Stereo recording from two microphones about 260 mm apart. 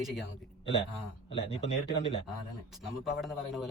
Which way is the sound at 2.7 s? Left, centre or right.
Centre.